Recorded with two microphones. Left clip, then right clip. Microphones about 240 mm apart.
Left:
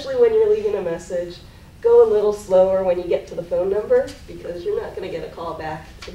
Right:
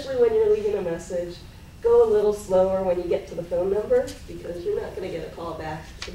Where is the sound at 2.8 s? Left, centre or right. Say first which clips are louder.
Left 4 dB; centre.